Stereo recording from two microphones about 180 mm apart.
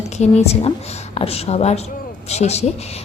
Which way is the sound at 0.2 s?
35° left (ahead or behind).